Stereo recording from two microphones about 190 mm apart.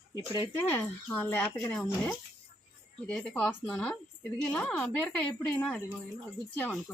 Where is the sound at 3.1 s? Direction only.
5° left (ahead or behind).